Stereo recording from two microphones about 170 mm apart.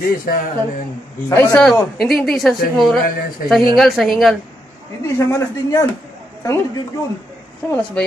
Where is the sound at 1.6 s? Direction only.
Centre (ahead or behind).